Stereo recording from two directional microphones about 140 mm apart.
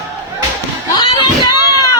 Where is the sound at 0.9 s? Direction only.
30° left (ahead or behind).